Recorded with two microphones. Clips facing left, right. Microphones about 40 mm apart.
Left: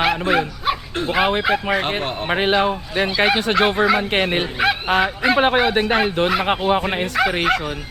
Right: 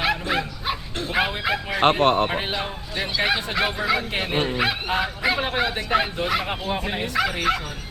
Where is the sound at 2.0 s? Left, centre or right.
Right.